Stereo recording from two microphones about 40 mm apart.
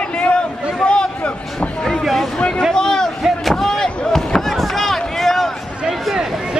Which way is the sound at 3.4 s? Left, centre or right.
Centre.